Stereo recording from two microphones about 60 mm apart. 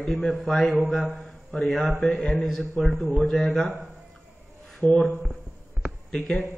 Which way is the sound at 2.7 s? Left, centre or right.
Left.